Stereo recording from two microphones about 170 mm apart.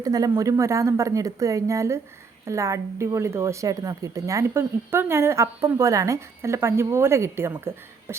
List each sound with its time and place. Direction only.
0.0 s a woman's voice: 20° right (ahead or behind)